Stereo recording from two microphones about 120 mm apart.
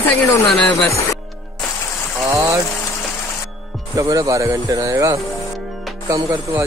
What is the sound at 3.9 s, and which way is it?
Speech, 30° right (ahead or behind).